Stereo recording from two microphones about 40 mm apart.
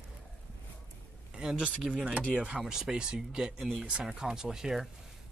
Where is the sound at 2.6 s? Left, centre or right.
Centre.